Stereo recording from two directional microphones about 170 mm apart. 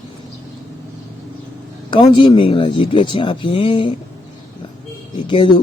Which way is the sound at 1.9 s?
30° left (ahead or behind).